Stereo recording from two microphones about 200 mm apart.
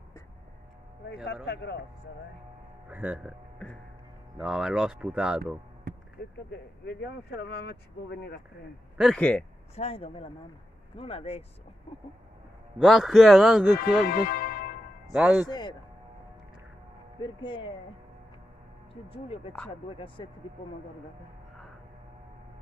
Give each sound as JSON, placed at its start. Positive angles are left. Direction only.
{"t": 1.0, "sound": "speech", "side_deg": 55}
{"t": 2.9, "sound": "speech", "side_deg": -5}
{"t": 4.4, "sound": "speech", "side_deg": 0}
{"t": 6.2, "sound": "speech", "side_deg": 50}
{"t": 8.9, "sound": "speech", "side_deg": -5}
{"t": 9.8, "sound": "speech", "side_deg": 30}
{"t": 12.7, "sound": "speech", "side_deg": 0}
{"t": 14.0, "sound": "music", "side_deg": 50}
{"t": 15.1, "sound": "speech", "side_deg": -5}
{"t": 15.4, "sound": "speech", "side_deg": 20}
{"t": 17.2, "sound": "speech", "side_deg": 25}
{"t": 19.0, "sound": "speech", "side_deg": 30}